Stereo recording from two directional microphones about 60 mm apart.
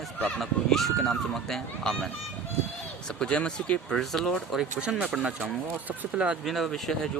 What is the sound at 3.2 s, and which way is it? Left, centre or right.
Speech, centre.